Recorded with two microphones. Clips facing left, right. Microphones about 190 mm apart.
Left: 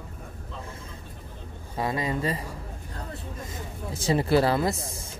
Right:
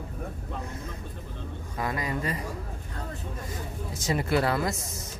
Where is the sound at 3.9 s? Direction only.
30° left (ahead or behind).